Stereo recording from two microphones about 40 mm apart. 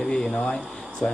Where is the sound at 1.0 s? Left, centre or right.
Left.